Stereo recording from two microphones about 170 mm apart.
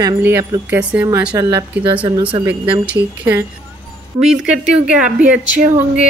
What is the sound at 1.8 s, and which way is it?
Speech, 30° right (ahead or behind).